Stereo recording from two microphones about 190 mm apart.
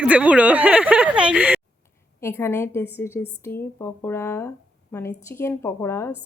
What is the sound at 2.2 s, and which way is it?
Speech, 15° left (ahead or behind).